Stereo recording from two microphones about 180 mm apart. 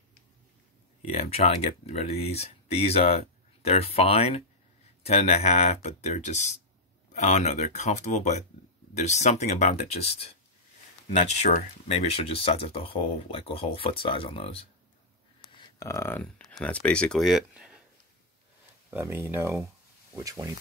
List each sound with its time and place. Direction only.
1.0 s speech: 35° left (ahead or behind)
15.5 s speech: 20° left (ahead or behind); by 17.8 s 5° right (ahead or behind)
18.9 s speech: 15° right (ahead or behind)